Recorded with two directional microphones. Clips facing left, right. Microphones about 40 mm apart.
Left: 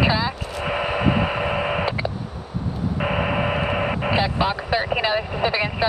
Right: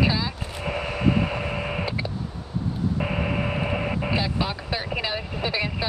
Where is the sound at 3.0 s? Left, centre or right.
Left.